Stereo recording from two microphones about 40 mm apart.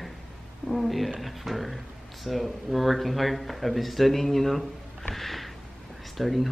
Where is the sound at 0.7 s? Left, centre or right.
Centre.